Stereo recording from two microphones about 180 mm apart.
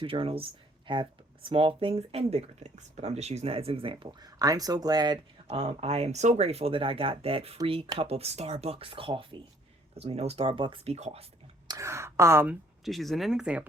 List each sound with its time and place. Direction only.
0.0 s speech: 30° right (ahead or behind)
11.7 s speech: 15° right (ahead or behind)
12.8 s speech: centre (ahead or behind)